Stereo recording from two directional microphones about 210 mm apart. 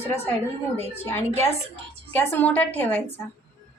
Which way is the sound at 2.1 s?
10° left (ahead or behind).